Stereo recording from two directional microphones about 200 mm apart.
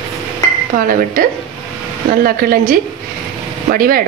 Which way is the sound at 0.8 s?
45° right (ahead or behind).